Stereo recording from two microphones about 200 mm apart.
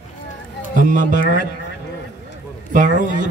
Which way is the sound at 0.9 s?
40° right (ahead or behind).